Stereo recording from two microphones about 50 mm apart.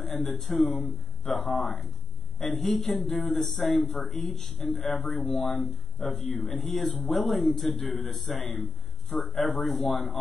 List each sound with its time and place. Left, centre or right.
0.0 s speech: centre